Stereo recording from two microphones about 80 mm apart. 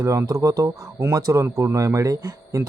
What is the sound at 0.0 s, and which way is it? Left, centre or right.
Speech, right.